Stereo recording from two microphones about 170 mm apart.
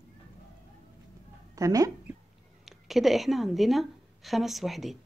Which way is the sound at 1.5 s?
20° right (ahead or behind).